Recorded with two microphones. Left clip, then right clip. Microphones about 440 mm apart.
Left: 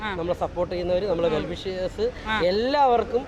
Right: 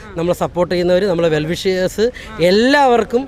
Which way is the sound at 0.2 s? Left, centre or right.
Right.